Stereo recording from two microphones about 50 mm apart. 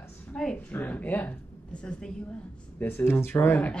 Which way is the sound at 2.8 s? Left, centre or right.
Left.